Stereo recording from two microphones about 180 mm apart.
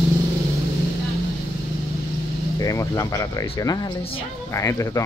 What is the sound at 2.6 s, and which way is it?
Speech, 20° left (ahead or behind).